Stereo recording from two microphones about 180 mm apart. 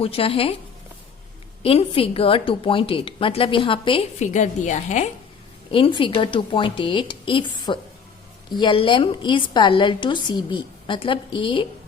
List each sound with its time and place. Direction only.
0.0 s a woman's voice: 30° left (ahead or behind)
1.6 s a woman's voice: 30° left (ahead or behind)
4.2 s a woman's voice: 40° left (ahead or behind)
5.7 s a woman's voice: 30° left (ahead or behind)